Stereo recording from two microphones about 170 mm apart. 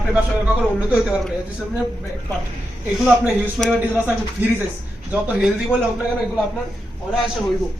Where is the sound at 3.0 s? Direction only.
Centre (ahead or behind).